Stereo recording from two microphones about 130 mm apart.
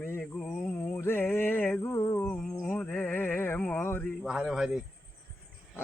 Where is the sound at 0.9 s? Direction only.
15° left (ahead or behind).